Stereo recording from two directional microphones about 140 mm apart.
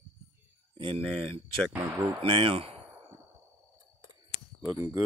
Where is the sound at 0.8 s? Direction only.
40° right (ahead or behind).